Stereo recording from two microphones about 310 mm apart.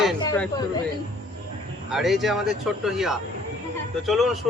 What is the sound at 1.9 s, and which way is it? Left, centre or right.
A man's voice, centre.